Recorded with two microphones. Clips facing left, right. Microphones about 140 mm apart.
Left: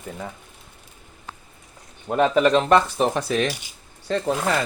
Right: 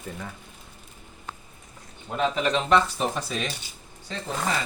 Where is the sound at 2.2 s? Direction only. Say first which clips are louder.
Left 7 dB; 60° left (ahead or behind).